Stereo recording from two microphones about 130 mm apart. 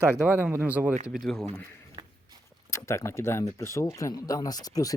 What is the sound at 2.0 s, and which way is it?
Walk, 35° right (ahead or behind).